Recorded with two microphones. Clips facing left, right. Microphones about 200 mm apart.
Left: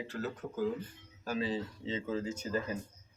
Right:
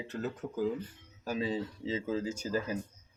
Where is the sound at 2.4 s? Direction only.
25° left (ahead or behind).